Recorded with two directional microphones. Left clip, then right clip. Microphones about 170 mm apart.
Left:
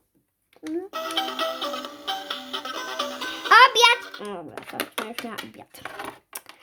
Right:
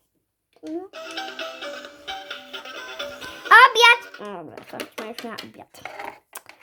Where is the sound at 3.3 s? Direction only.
5° left (ahead or behind).